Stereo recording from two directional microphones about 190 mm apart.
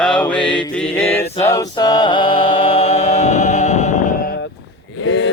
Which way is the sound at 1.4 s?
15° left (ahead or behind).